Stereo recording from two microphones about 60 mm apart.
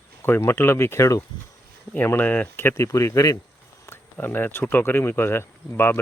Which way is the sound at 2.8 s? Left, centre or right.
Left.